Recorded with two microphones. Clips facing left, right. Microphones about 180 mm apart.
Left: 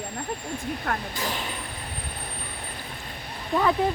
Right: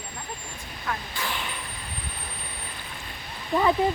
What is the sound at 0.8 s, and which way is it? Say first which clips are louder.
Speech: left 3 dB; 45° left (ahead or behind).